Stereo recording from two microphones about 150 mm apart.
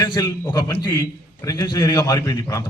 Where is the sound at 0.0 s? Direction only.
25° left (ahead or behind).